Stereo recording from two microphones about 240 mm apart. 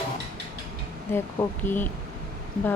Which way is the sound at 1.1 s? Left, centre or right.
Centre.